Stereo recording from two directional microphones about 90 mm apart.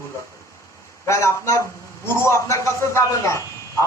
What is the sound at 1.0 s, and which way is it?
A man's voice, 35° left (ahead or behind).